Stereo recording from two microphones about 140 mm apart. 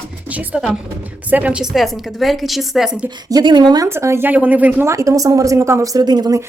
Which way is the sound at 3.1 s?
30° right (ahead or behind).